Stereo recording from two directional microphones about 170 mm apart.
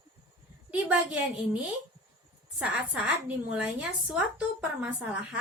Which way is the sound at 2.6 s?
5° right (ahead or behind).